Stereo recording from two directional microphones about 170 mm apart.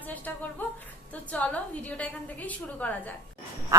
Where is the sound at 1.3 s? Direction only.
10° left (ahead or behind).